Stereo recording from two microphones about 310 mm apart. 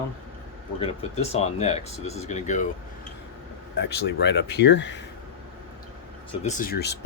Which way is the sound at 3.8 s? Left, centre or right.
Left.